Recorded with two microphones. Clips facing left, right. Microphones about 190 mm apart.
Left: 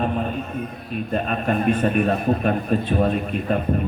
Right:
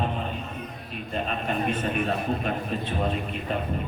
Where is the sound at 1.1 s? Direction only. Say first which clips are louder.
Left 6 dB; 50° left (ahead or behind).